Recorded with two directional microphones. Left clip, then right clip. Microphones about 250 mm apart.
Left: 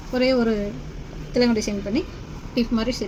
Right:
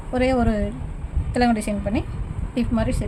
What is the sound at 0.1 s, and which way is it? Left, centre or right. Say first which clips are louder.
A woman's voice: left 1 dB; right.